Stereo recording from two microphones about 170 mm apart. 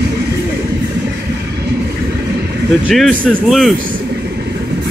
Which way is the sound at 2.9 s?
5° left (ahead or behind).